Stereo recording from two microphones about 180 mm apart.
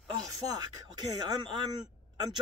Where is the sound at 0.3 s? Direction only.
20° right (ahead or behind).